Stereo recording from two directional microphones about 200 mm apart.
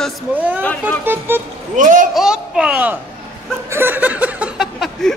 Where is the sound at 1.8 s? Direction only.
40° right (ahead or behind).